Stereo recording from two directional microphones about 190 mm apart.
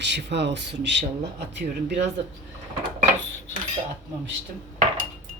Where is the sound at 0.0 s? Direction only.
65° right (ahead or behind).